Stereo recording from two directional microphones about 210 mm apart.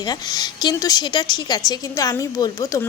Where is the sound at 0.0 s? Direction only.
20° left (ahead or behind).